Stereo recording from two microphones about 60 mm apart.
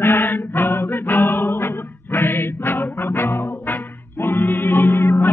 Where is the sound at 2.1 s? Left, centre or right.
Left.